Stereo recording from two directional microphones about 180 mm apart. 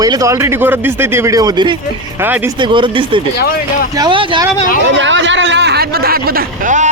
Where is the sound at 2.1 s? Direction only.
10° right (ahead or behind).